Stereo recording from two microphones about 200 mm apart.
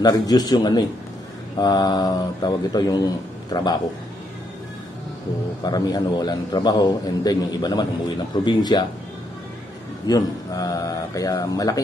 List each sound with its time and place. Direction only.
0.0 s a man's voice: 20° left (ahead or behind)
5.6 s a man's voice: 20° left (ahead or behind)
10.0 s speech: 20° left (ahead or behind)